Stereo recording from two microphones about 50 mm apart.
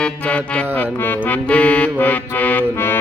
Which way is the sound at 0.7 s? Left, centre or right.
Left.